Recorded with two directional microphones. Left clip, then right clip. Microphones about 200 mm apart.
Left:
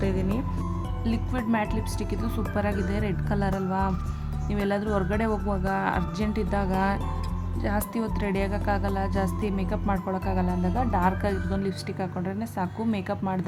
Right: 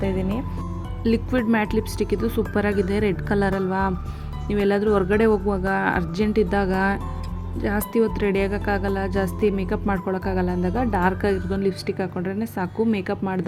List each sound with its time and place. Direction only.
0.0 s music: 5° right (ahead or behind)
1.0 s speech: 15° right (ahead or behind)